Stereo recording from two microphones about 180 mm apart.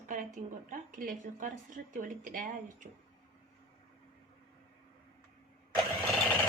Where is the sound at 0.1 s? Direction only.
45° right (ahead or behind).